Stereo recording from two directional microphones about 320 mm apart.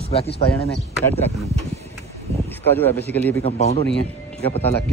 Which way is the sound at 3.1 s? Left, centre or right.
Centre.